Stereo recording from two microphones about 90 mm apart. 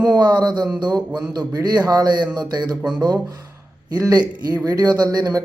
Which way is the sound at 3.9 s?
45° right (ahead or behind).